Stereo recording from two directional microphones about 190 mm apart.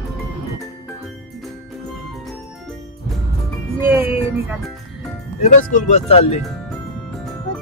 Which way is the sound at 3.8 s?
10° right (ahead or behind).